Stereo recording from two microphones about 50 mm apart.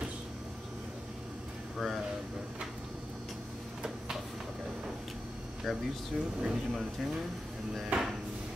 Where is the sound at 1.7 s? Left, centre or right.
Centre.